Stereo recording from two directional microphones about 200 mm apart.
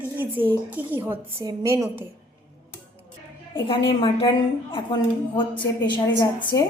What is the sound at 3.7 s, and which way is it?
A woman's voice, 25° left (ahead or behind).